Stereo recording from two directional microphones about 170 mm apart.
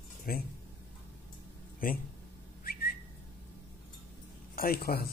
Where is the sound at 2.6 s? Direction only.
60° left (ahead or behind).